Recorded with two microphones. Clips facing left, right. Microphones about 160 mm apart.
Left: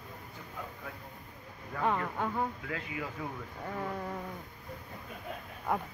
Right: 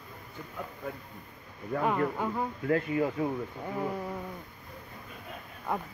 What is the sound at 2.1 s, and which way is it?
Speech, 5° right (ahead or behind).